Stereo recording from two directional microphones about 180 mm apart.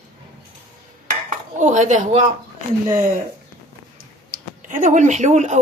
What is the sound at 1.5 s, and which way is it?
Speech, 45° right (ahead or behind).